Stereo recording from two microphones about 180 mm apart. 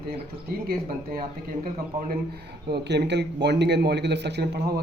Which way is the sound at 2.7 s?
70° right (ahead or behind).